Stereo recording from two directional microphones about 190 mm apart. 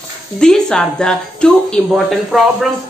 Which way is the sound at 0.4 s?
5° left (ahead or behind).